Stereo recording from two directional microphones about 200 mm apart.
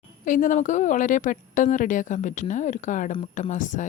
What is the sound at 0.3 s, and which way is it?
A woman's voice, 40° left (ahead or behind).